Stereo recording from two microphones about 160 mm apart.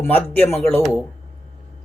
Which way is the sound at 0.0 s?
10° left (ahead or behind).